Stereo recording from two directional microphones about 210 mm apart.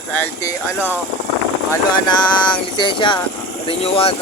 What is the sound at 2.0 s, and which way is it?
Speech, 20° left (ahead or behind).